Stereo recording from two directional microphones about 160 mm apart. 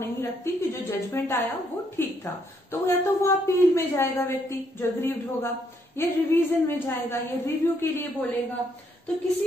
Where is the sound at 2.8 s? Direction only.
15° left (ahead or behind).